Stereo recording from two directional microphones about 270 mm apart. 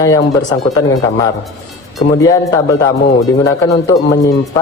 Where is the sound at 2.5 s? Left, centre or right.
Centre.